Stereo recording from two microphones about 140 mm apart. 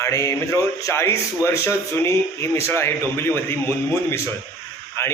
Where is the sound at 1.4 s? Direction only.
20° left (ahead or behind).